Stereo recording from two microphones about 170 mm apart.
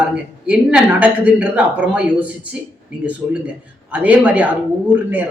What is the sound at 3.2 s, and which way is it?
Speech, 25° right (ahead or behind).